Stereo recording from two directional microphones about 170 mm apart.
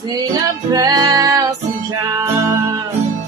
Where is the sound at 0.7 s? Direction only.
25° right (ahead or behind).